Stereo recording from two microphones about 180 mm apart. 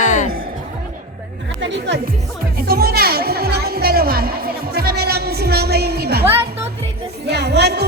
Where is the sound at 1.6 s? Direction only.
80° right.